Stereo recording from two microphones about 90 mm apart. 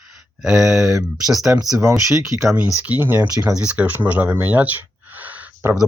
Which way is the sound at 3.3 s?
40° right (ahead or behind).